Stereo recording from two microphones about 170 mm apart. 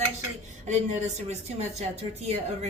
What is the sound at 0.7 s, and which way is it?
Speech, 40° right (ahead or behind).